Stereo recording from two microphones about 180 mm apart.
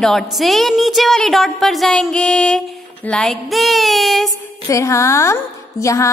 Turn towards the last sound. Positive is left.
turn(degrees=15)  # may be behind; listen again after turning